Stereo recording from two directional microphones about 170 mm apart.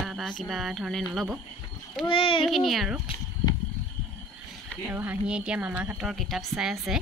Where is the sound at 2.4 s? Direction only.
Centre (ahead or behind).